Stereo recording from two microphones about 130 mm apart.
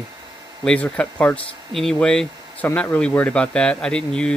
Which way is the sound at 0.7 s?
10° left (ahead or behind).